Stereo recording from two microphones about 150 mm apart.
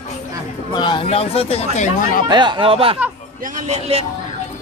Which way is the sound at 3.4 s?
55° right (ahead or behind).